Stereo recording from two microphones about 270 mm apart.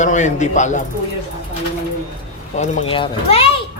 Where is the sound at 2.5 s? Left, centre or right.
Left.